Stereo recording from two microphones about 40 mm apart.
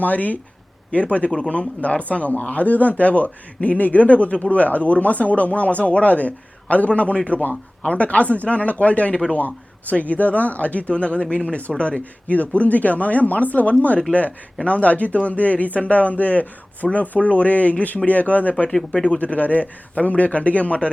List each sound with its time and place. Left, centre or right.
0.0 s speech: left
18.9 s speech: left
19.2 s speech: left